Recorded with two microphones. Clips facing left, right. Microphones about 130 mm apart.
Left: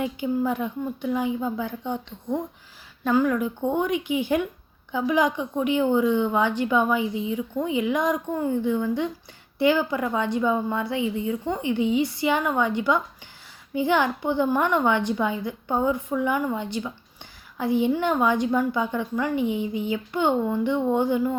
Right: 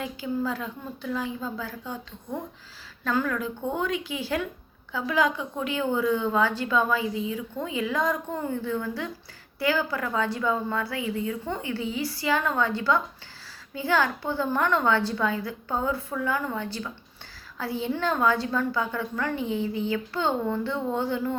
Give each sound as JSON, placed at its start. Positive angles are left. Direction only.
{"t": 0.0, "sound": "a woman's voice", "side_deg": 20}